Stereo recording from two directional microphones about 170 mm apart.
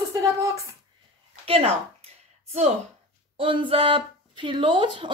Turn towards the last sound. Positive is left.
turn(degrees=-30)  # may be behind; listen again after turning